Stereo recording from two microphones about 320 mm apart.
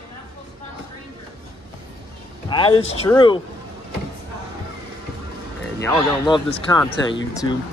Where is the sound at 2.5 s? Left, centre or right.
Centre.